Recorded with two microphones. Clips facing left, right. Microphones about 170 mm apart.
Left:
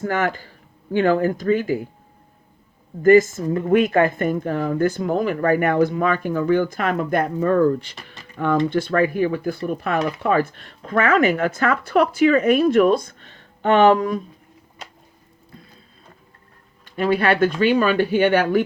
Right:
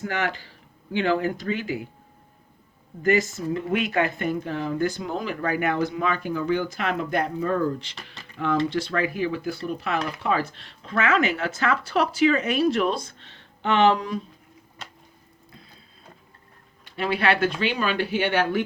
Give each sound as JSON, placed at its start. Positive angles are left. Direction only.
{"t": 0.0, "sound": "speech", "side_deg": 45}
{"t": 3.0, "sound": "speech", "side_deg": 50}
{"t": 8.2, "sound": "a sound", "side_deg": 50}
{"t": 8.7, "sound": "speech", "side_deg": 50}
{"t": 16.8, "sound": "speech", "side_deg": 45}